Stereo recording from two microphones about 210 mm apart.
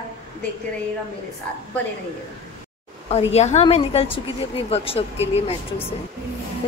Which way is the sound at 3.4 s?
30° left (ahead or behind).